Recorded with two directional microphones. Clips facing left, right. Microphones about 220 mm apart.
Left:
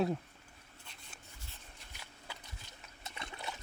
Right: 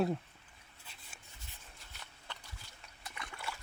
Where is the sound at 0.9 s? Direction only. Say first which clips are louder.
Right 1 dB; 5° right (ahead or behind).